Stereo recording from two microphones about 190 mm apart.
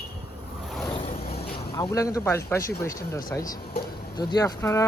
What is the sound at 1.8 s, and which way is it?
Speech, 15° left (ahead or behind).